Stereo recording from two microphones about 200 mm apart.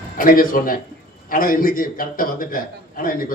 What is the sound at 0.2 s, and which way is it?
A man's voice, 45° left (ahead or behind).